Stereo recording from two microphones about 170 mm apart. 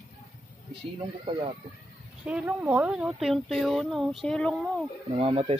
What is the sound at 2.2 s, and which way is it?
Speech, 10° right (ahead or behind).